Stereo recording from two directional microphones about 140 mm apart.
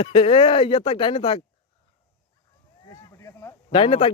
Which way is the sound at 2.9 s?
20° left (ahead or behind).